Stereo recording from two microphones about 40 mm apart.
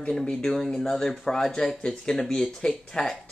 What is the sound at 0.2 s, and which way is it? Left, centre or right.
Speech, left.